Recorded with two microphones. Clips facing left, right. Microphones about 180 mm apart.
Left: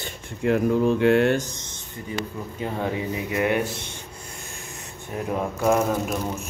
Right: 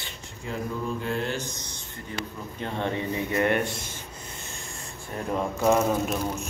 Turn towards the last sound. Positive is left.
turn(degrees=0)  # may be behind; listen again after turning